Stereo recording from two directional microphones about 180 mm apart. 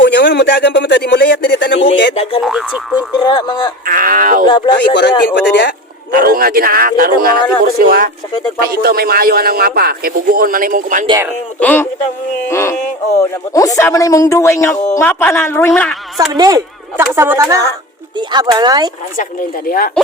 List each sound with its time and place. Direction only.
0.0 s speech: 75° left (ahead or behind)
2.4 s speech: 5° right (ahead or behind)
3.2 s speech: 25° left (ahead or behind)
3.8 s speech: 50° right (ahead or behind)
4.4 s speech: 30° left (ahead or behind)
4.9 s speech: 75° left (ahead or behind)
6.1 s a man's voice: 55° right (ahead or behind)
11.6 s speech: 10° left (ahead or behind)
16.4 s speech: 20° right (ahead or behind)
19.1 s speech: 50° left (ahead or behind)